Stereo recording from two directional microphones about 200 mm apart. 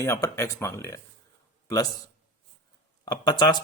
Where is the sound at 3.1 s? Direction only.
20° left (ahead or behind).